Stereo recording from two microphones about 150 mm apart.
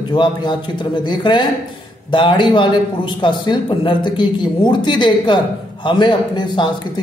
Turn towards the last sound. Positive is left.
turn(degrees=30)  # may be behind; listen again after turning